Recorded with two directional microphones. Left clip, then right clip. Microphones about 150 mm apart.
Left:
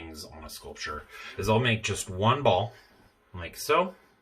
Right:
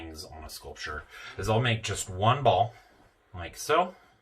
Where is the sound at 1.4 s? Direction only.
30° left (ahead or behind).